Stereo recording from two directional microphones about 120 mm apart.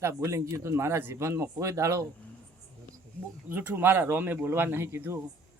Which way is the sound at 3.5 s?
15° right (ahead or behind).